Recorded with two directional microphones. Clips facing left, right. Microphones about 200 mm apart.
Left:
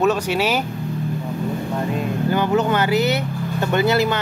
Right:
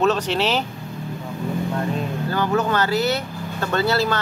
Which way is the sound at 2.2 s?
20° left (ahead or behind).